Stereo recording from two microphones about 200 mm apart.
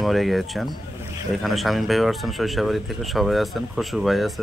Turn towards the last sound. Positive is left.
turn(degrees=0)  # may be behind; listen again after turning